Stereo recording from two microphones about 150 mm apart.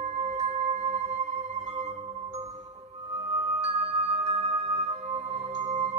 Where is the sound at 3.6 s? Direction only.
45° right (ahead or behind).